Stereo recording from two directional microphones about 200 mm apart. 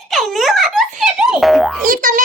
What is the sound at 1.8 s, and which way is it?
Speech, 45° right (ahead or behind).